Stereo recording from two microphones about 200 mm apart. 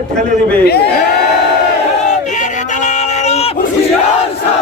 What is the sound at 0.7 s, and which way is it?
Speech, 55° left (ahead or behind).